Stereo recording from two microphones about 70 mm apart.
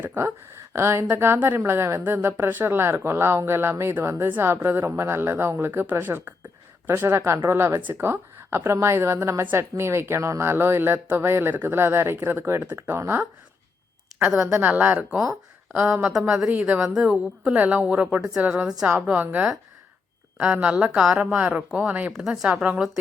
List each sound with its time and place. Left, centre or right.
0.0 s a woman's voice: right
14.2 s a woman's voice: centre
14.6 s a woman's voice: right
16.1 s a woman's voice: centre
16.5 s a woman's voice: right
22.2 s speech: centre
22.4 s a woman's voice: centre